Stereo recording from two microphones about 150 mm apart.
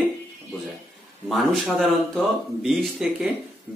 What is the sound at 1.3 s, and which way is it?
Speech, centre (ahead or behind).